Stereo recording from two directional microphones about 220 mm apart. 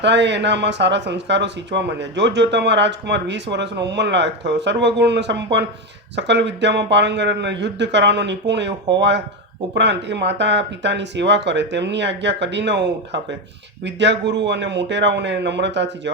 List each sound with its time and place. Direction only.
0.0 s speech: 50° right (ahead or behind)